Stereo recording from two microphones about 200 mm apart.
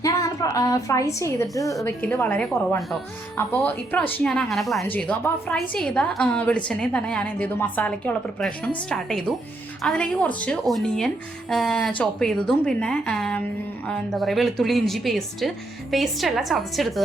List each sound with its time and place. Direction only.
0.0 s a woman's voice: 15° left (ahead or behind); by 17.0 s centre (ahead or behind)